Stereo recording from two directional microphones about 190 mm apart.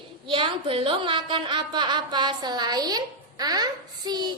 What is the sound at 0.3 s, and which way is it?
A woman's voice, 25° right (ahead or behind).